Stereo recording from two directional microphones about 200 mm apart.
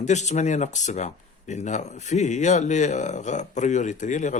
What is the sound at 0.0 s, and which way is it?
Speech, 35° left (ahead or behind).